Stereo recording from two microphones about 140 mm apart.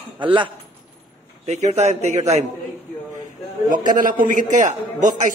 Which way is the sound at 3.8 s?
70° right (ahead or behind).